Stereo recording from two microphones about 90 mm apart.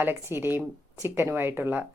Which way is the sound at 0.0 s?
25° right (ahead or behind).